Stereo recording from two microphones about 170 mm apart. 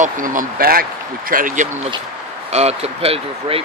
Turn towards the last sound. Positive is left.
turn(degrees=-35)  # may be behind; listen again after turning